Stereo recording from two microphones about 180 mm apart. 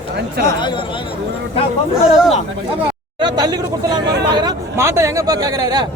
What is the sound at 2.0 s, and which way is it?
Speech, 5° right (ahead or behind).